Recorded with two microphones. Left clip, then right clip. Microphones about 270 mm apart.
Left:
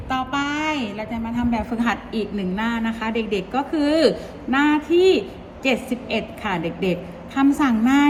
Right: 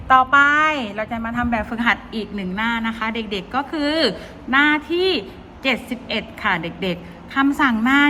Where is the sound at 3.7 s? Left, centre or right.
Right.